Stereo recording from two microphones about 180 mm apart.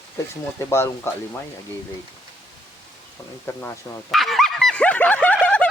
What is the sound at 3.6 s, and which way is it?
Speech, 15° left (ahead or behind).